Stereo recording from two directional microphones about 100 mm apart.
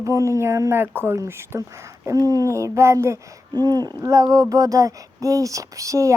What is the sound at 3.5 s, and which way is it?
Speech, 40° right (ahead or behind).